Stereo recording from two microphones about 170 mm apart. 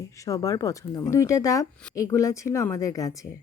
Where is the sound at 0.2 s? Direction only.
20° left (ahead or behind).